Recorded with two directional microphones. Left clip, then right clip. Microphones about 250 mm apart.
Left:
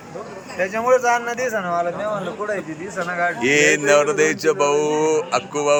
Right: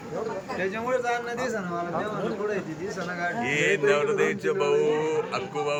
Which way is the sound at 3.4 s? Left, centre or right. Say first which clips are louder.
Left 7 dB; centre.